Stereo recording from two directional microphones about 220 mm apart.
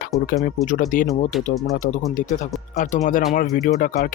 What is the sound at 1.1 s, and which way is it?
Speech, centre (ahead or behind).